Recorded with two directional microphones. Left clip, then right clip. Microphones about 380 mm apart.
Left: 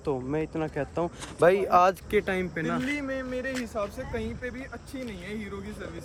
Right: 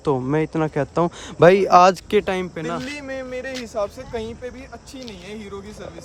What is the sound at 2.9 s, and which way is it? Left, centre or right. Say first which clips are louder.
Speech: right 2 dB; right.